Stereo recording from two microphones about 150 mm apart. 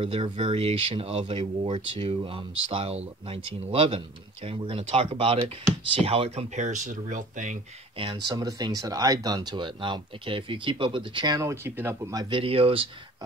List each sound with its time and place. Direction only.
0.0 s speech: 35° right (ahead or behind); by 7.5 s 60° right (ahead or behind)
8.0 s speech: 30° right (ahead or behind)